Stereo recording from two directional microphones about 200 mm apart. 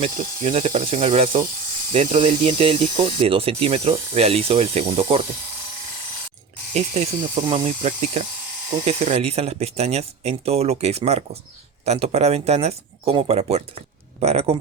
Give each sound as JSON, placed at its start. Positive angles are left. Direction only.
{"t": 0.0, "sound": "speech", "side_deg": -40}
{"t": 6.7, "sound": "speech", "side_deg": -30}